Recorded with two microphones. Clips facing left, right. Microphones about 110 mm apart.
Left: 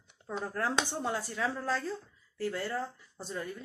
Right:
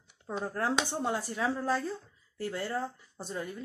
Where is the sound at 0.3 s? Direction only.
20° right (ahead or behind).